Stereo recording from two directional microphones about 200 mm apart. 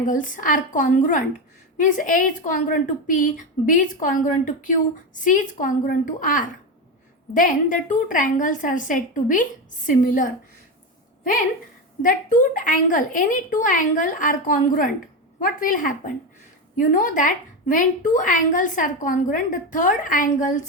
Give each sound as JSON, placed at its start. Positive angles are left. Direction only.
{"t": 0.0, "sound": "a woman's voice", "side_deg": 40}
{"t": 12.0, "sound": "a woman's voice", "side_deg": 40}